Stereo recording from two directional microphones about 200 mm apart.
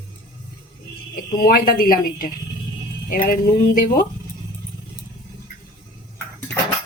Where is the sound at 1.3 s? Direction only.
45° left (ahead or behind).